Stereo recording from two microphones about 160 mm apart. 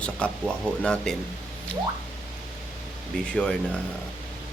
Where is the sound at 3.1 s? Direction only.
5° left (ahead or behind).